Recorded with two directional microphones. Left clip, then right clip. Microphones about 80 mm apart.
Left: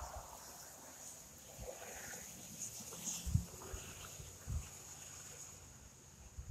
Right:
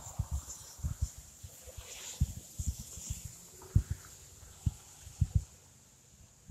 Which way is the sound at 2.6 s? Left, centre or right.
Left.